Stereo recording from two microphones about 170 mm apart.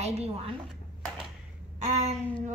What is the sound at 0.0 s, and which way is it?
Speech, 40° right (ahead or behind).